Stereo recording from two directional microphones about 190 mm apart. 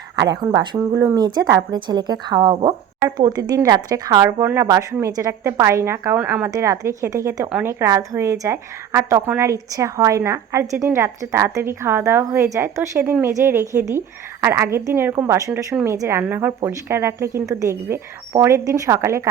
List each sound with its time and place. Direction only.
0.4 s a woman's voice: 20° right (ahead or behind)